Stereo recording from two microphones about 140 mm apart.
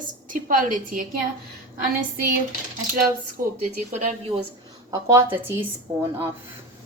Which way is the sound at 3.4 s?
90° right.